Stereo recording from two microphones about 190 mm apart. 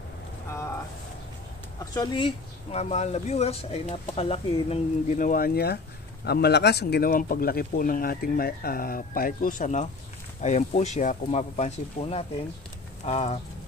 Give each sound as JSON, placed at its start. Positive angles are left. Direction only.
{"t": 1.8, "sound": "speech", "side_deg": 25}